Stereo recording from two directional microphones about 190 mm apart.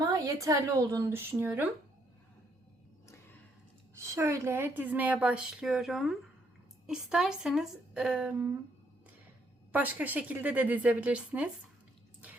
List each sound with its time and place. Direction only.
0.1 s a woman's voice: 15° right (ahead or behind)
4.0 s a woman's voice: 15° right (ahead or behind)
9.7 s a woman's voice: 10° right (ahead or behind)